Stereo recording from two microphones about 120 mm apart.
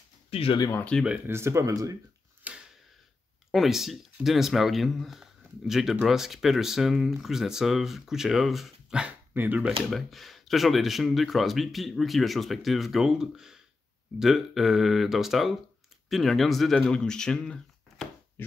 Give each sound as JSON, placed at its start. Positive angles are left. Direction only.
{"t": 0.3, "sound": "speech", "side_deg": 55}
{"t": 1.0, "sound": "speech", "side_deg": -10}
{"t": 1.3, "sound": "speech", "side_deg": -25}
{"t": 2.4, "sound": "mechanisms", "side_deg": -5}
{"t": 3.5, "sound": "speech", "side_deg": 0}
{"t": 9.7, "sound": "speech", "side_deg": 0}